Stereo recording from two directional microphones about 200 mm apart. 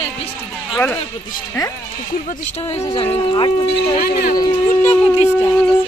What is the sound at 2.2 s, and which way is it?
Speech, 30° left (ahead or behind).